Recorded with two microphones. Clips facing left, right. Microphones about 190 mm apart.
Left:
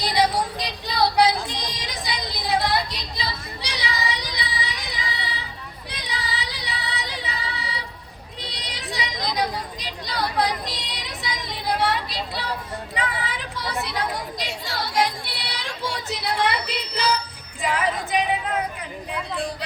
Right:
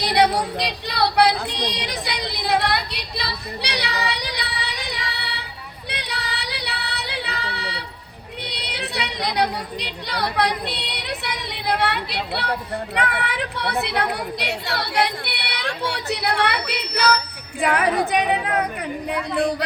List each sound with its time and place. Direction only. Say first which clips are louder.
0.0 s female singing: right 3 dB; 65° right (ahead or behind)
8.4 s a sound: right 2 dB; 65° right (ahead or behind)
17.6 s speech: right 5 dB; 65° right (ahead or behind)